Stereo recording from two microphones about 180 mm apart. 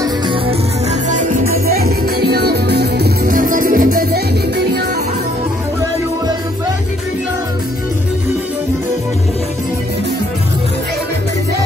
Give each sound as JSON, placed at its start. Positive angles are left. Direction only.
{"t": 0.0, "sound": "music", "side_deg": -25}
{"t": 1.0, "sound": "music", "side_deg": -45}